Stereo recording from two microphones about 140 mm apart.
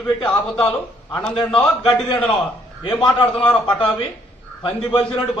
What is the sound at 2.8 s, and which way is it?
Speech, 35° left (ahead or behind).